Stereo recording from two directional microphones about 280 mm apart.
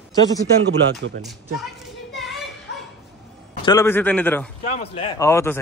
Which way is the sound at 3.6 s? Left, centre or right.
Centre.